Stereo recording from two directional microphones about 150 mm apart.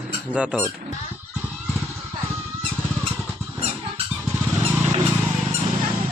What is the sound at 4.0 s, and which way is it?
Vehicle, 40° right (ahead or behind).